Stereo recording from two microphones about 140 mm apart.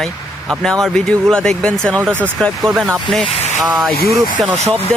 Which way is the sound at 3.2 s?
50° left (ahead or behind).